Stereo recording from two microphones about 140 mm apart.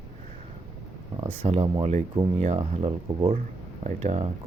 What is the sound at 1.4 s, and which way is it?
Speech, 45° right (ahead or behind).